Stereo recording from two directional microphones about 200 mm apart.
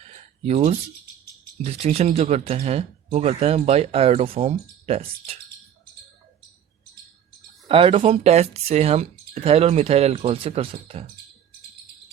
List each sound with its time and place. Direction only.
0.1 s a sound: 30° right (ahead or behind)
1.6 s speech: 30° right (ahead or behind)
7.7 s speech: 30° right (ahead or behind)